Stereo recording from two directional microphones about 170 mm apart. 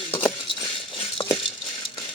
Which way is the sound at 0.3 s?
30° left (ahead or behind).